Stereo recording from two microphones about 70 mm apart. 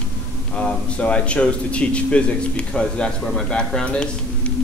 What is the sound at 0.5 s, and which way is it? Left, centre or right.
A man's voice, centre.